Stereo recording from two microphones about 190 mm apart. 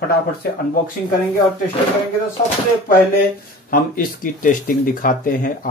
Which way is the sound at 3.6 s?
45° left (ahead or behind).